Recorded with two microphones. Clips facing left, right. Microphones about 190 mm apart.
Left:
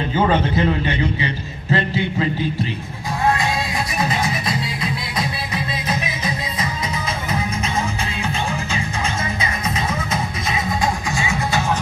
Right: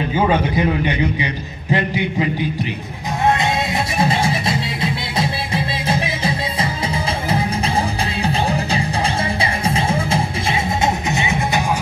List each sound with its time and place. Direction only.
0.1 s a man's voice: 15° right (ahead or behind)
3.3 s music: 25° right (ahead or behind)